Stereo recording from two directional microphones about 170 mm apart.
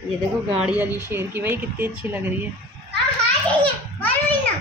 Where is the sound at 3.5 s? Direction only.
10° left (ahead or behind).